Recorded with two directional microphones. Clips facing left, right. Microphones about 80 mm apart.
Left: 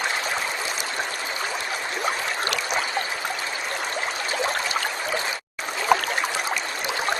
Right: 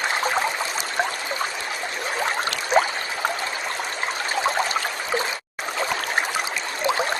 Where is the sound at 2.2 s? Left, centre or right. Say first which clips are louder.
Right 2 dB; right.